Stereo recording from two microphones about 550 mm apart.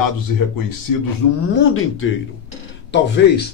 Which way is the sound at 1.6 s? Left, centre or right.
Left.